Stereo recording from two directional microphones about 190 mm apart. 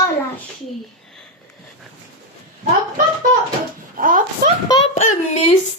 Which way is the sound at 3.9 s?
45° right (ahead or behind).